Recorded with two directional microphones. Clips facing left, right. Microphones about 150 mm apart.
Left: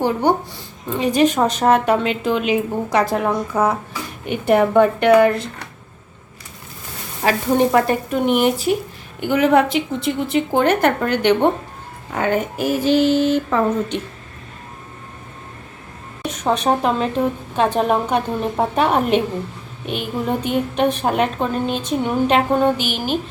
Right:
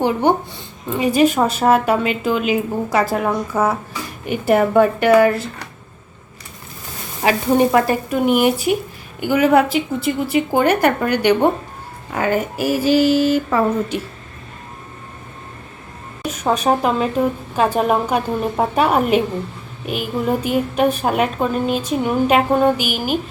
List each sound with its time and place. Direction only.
0.0 s speech: 20° right (ahead or behind)
0.9 s speech: 10° right (ahead or behind)
7.2 s a woman's voice: 10° right (ahead or behind)
16.2 s a woman's voice: 5° right (ahead or behind)